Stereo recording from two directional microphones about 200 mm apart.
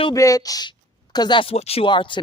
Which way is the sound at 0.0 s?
15° left (ahead or behind).